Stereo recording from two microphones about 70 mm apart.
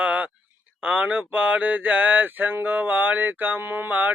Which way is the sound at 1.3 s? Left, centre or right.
Right.